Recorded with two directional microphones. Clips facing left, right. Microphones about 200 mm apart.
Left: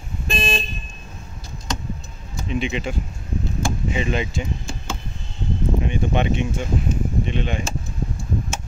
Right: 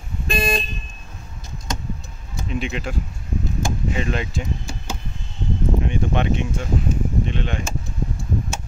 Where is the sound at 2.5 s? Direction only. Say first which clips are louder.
Left 2 dB; centre (ahead or behind).